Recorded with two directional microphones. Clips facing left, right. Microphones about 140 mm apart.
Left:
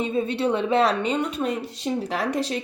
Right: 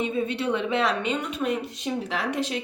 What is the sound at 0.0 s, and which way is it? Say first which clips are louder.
A woman's voice: left 3 dB; 30° left (ahead or behind).